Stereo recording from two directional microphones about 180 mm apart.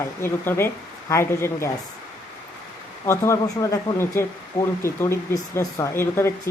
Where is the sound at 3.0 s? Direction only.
15° left (ahead or behind).